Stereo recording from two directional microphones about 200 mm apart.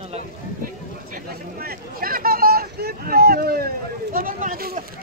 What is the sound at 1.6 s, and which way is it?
Speech, 45° right (ahead or behind).